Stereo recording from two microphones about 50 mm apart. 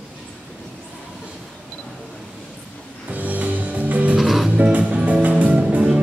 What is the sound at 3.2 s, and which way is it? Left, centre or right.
Music, right.